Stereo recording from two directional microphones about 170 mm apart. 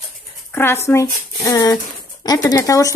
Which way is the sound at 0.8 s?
15° left (ahead or behind).